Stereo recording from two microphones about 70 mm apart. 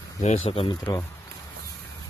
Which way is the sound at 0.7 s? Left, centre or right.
Left.